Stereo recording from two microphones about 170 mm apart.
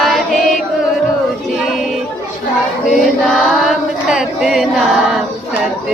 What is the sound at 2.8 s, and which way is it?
Chant, centre (ahead or behind).